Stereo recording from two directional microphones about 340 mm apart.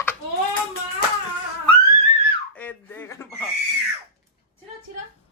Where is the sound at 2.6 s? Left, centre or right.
Centre.